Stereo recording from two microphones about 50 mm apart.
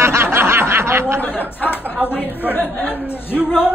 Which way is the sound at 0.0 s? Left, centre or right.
Right.